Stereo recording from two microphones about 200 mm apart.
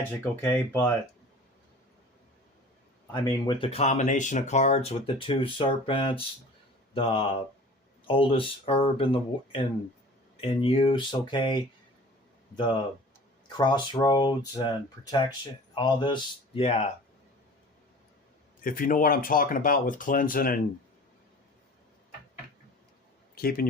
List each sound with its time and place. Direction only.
0.2 s speech: 10° left (ahead or behind)
3.1 s speech: 20° left (ahead or behind)
13.6 s speech: 25° left (ahead or behind)
18.6 s speech: 45° left (ahead or behind)
23.3 s speech: 50° left (ahead or behind)